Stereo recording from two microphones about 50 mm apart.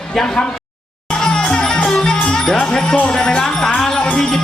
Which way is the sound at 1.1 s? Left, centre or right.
Centre.